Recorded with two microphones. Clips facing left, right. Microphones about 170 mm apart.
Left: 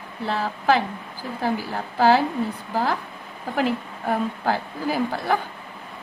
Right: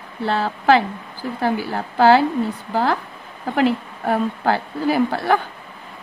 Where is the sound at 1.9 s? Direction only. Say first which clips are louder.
Right 4 dB; 70° right (ahead or behind).